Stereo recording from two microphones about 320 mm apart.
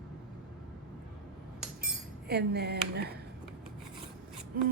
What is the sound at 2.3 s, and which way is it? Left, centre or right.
Speech, right.